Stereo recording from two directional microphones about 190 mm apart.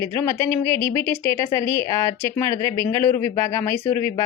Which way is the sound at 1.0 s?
10° left (ahead or behind).